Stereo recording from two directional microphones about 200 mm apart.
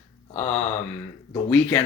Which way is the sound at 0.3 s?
10° left (ahead or behind).